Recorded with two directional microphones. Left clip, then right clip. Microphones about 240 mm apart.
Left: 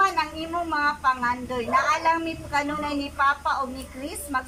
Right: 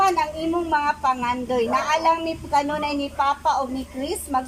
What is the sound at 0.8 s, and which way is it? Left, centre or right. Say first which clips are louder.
A woman's voice: right 1 dB; right.